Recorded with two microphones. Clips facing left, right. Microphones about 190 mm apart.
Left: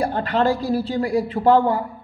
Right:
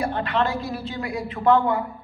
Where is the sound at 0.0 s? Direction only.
35° left (ahead or behind).